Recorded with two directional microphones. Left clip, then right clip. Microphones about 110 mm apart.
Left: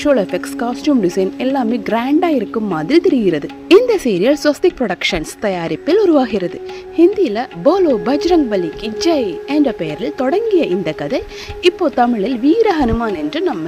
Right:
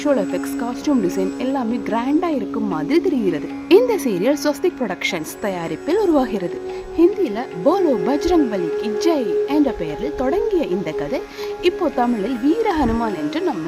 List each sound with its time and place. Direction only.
0.0 s speech: 45° left (ahead or behind)
3.7 s a woman's voice: 30° left (ahead or behind)